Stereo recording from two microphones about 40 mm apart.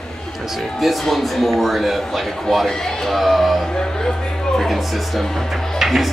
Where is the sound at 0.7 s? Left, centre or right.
Centre.